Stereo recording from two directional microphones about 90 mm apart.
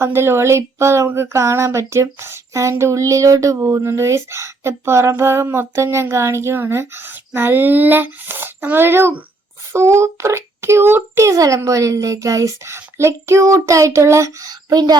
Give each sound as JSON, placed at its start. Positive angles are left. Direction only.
{"t": 0.0, "sound": "a child's voice", "side_deg": -25}